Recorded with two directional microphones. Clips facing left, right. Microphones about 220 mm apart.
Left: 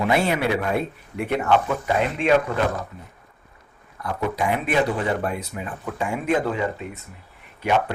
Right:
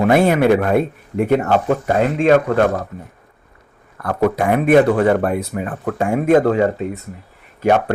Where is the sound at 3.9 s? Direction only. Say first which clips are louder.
Right 9 dB; 55° right (ahead or behind).